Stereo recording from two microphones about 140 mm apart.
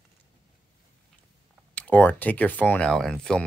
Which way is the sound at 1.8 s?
10° left (ahead or behind).